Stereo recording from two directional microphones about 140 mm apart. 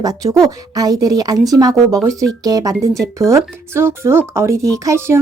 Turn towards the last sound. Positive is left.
turn(degrees=-20)  # may be behind; listen again after turning